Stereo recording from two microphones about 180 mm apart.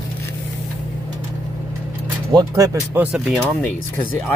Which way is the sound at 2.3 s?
20° right (ahead or behind).